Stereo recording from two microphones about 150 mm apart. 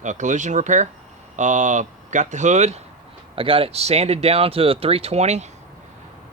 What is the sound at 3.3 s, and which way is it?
Speech, 35° right (ahead or behind).